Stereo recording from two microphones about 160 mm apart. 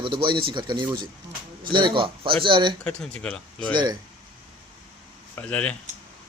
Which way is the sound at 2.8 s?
5° left (ahead or behind).